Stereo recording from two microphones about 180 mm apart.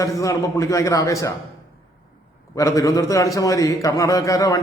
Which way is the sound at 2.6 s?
15° left (ahead or behind).